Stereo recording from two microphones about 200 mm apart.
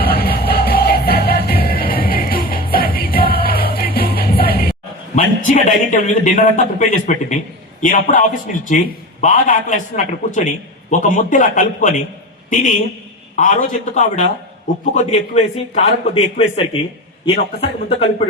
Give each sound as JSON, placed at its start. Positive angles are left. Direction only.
{"t": 0.0, "sound": "music", "side_deg": 50}
{"t": 5.1, "sound": "a man's voice", "side_deg": 40}
{"t": 15.7, "sound": "a man's voice", "side_deg": 35}